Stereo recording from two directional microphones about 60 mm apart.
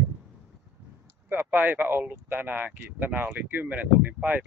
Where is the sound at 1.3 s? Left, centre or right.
Right.